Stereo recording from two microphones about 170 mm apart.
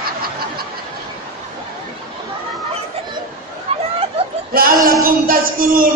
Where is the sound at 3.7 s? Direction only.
35° right (ahead or behind).